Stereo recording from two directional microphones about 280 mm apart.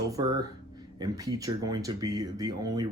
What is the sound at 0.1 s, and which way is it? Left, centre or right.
Speech, centre.